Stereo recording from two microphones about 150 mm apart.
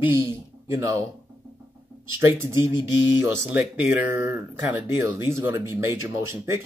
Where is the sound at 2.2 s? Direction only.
15° right (ahead or behind).